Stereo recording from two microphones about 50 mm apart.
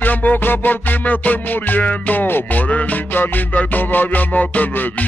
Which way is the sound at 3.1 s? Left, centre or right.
Left.